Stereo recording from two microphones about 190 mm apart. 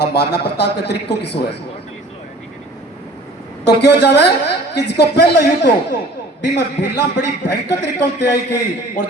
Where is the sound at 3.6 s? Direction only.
60° left (ahead or behind).